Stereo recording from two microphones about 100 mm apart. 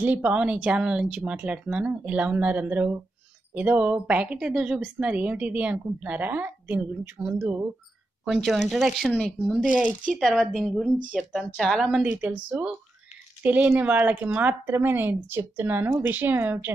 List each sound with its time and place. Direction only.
0.0 s speech: 15° right (ahead or behind)
8.3 s speech: centre (ahead or behind)
9.8 s speech: 15° right (ahead or behind)
10.1 s speech: centre (ahead or behind)
12.1 s speech: 15° right (ahead or behind)